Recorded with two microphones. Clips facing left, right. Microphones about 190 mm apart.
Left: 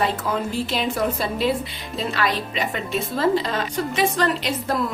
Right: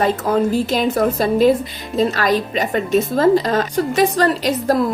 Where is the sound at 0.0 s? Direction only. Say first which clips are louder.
Right 7 dB; 45° right (ahead or behind).